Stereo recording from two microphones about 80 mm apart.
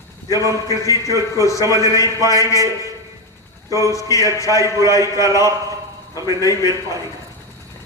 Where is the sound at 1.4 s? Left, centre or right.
Left.